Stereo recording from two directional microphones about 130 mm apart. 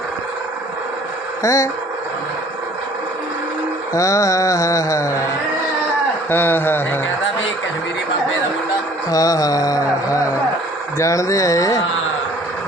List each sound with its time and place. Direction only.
1.4 s speech: 25° left (ahead or behind)
3.9 s speech: 25° left (ahead or behind)
6.3 s speech: 15° left (ahead or behind)
9.0 s speech: 25° left (ahead or behind)